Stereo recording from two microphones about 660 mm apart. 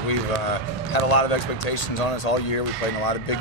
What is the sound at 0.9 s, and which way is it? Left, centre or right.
Speech, left.